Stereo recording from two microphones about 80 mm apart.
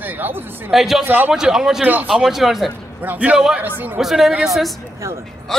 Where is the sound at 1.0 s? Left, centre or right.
Right.